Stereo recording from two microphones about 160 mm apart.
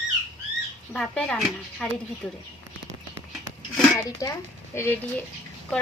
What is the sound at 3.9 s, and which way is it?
Speech, 20° left (ahead or behind).